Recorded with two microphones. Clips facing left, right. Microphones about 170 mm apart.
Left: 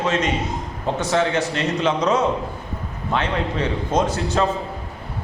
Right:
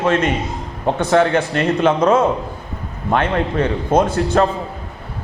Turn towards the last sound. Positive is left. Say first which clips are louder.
# right 5 dB
turn(degrees=-55)  # may be behind; listen again after turning